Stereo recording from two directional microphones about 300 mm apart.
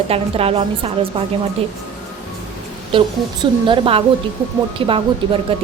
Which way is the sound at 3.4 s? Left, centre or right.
Centre.